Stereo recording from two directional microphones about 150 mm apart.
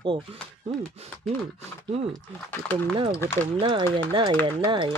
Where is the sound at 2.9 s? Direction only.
35° right (ahead or behind).